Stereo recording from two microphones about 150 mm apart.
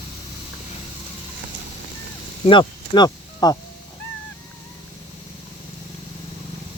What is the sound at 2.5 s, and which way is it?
Speech, 30° left (ahead or behind).